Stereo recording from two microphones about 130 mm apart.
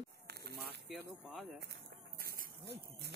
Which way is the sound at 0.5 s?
Centre (ahead or behind).